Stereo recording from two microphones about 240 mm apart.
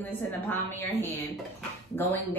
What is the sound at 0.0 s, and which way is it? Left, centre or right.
A woman's voice, centre.